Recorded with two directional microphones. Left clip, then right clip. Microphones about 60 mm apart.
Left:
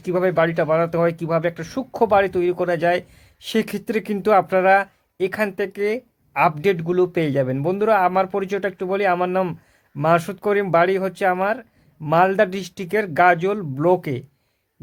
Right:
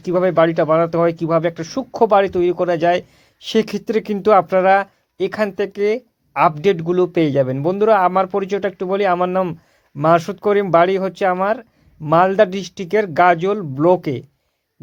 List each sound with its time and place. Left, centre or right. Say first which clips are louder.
0.0 s speech: right 4 dB; right
1.6 s speech: right 4 dB; right
2.0 s speech: right 3 dB; right
10.2 s speech: right 4 dB; right